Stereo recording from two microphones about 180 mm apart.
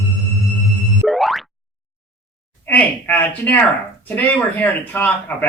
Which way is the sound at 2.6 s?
10° left (ahead or behind).